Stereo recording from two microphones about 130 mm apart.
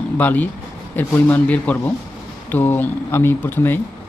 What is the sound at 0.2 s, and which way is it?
Speech, 15° left (ahead or behind).